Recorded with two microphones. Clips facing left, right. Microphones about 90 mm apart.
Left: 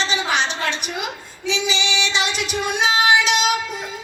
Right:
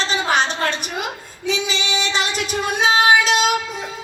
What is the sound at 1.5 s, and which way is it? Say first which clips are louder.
Child singing: even; 45° right (ahead or behind).